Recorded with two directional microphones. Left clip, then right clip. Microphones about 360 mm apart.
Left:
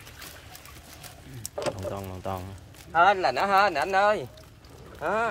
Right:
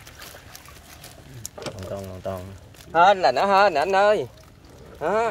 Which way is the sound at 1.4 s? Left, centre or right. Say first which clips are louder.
Left 4 dB; centre.